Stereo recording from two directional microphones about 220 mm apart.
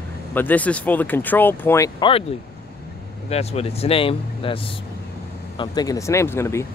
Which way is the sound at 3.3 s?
30° left (ahead or behind).